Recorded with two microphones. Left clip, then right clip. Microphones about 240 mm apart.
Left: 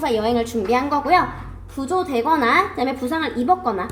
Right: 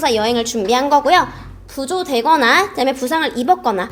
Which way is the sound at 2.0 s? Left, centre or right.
Right.